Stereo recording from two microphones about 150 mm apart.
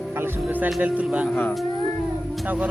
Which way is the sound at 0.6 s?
5° right (ahead or behind).